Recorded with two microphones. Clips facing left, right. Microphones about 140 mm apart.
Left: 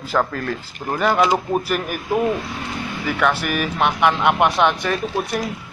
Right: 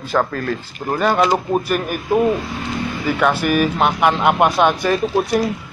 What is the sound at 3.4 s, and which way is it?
Speech, 30° right (ahead or behind).